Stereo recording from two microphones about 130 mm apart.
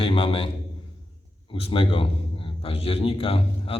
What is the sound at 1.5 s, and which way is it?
A man's voice, 45° left (ahead or behind).